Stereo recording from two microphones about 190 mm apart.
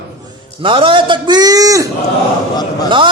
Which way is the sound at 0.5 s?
25° right (ahead or behind).